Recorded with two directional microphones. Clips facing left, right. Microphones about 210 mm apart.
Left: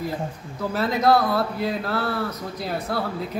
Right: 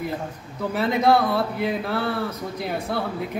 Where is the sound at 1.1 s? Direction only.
Centre (ahead or behind).